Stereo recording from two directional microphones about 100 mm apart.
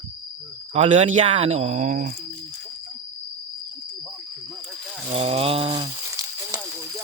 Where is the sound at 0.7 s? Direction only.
90° right.